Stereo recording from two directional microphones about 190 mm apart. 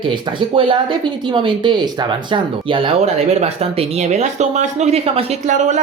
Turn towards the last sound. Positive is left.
turn(degrees=-40)  # may be behind; listen again after turning